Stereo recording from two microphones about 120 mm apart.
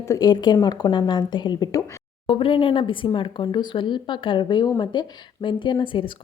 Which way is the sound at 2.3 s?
45° left (ahead or behind).